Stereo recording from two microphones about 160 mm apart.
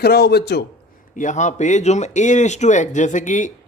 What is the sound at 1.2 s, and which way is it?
Speech, 50° left (ahead or behind).